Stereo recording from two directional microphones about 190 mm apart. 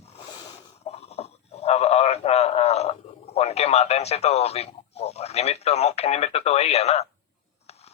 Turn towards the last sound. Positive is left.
turn(degrees=35)  # may be behind; listen again after turning